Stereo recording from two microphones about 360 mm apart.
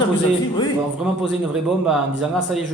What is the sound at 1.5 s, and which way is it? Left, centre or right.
A man's voice, centre.